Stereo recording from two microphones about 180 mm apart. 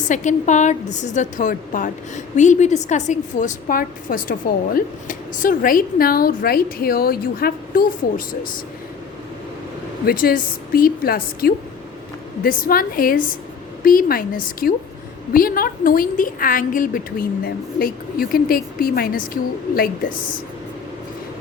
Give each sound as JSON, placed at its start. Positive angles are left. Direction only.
{"t": 0.1, "sound": "a woman's voice", "side_deg": 45}
{"t": 10.1, "sound": "a woman's voice", "side_deg": 55}